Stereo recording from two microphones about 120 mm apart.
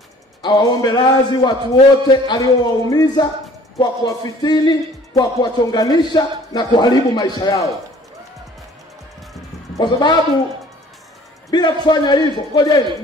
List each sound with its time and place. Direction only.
0.4 s speech: 35° left (ahead or behind)
9.8 s speech: 40° left (ahead or behind)
11.5 s speech: 35° left (ahead or behind)